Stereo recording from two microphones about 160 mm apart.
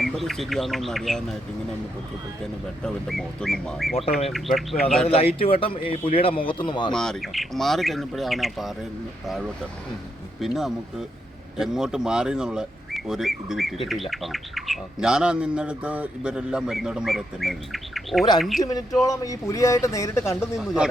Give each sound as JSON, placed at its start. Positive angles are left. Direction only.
{"t": 0.0, "sound": "speech", "side_deg": 0}
{"t": 2.8, "sound": "speech", "side_deg": 0}
{"t": 5.0, "sound": "speech", "side_deg": 40}
{"t": 6.9, "sound": "speech", "side_deg": 5}
{"t": 19.0, "sound": "speech", "side_deg": 20}